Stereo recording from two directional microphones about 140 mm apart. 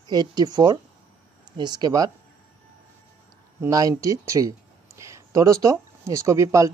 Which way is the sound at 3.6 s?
20° right (ahead or behind).